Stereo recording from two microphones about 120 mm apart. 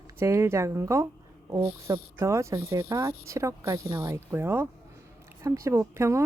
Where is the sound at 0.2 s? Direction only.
20° right (ahead or behind).